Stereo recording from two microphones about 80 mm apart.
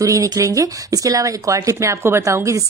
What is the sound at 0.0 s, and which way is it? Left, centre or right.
A woman's voice, right.